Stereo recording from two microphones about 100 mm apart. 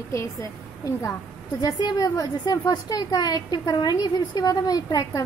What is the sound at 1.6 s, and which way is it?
A woman's voice, 45° left (ahead or behind).